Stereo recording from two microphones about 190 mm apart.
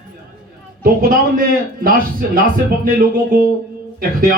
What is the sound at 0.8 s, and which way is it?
A man's voice, 50° right (ahead or behind).